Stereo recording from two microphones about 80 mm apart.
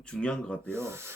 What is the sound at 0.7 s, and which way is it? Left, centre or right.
Rub, right.